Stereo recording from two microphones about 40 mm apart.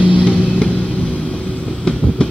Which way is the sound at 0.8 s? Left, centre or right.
Left.